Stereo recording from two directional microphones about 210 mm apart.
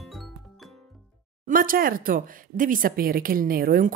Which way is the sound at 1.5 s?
40° right (ahead or behind).